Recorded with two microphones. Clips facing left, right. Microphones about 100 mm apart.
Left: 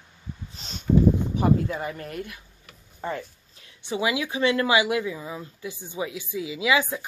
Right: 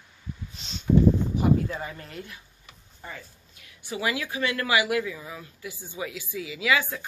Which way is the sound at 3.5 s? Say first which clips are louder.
Left 5 dB; 25° left (ahead or behind).